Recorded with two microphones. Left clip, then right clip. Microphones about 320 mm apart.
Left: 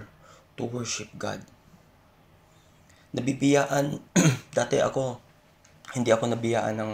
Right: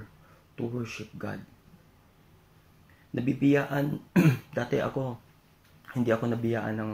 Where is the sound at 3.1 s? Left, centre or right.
Left.